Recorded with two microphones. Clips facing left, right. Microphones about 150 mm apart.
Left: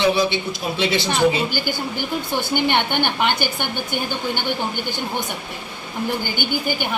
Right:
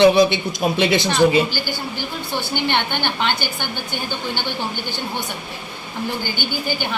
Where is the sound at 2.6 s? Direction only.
15° left (ahead or behind).